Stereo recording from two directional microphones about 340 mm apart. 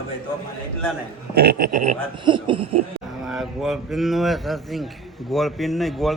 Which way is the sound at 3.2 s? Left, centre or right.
Centre.